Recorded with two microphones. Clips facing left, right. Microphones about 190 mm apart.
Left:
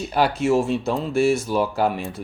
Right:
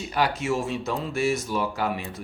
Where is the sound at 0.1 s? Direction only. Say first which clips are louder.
Left 6 dB; 35° left (ahead or behind).